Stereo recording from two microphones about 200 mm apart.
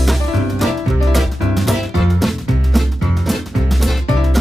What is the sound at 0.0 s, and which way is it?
Music, centre (ahead or behind).